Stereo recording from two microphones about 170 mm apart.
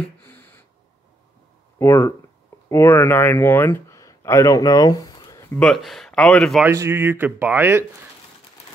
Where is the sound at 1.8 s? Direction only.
10° left (ahead or behind).